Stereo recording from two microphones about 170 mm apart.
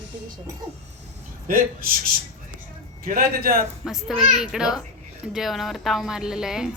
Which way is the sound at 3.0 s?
60° right (ahead or behind).